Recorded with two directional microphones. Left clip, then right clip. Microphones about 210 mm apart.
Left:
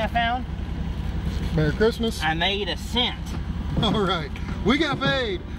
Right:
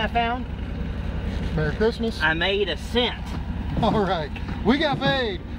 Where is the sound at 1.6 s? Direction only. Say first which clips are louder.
Left 1 dB; 20° left (ahead or behind).